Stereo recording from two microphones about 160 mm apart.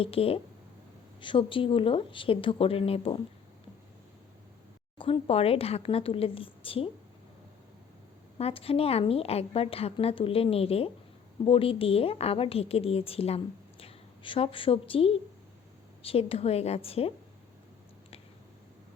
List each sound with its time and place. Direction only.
0.0 s a woman's voice: 35° left (ahead or behind)
4.9 s a woman's voice: 35° left (ahead or behind)
8.4 s a woman's voice: 35° left (ahead or behind)